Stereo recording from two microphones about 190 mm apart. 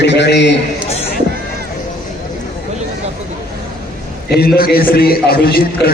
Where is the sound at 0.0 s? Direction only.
65° left (ahead or behind).